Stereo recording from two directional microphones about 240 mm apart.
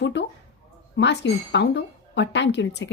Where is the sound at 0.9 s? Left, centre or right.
Left.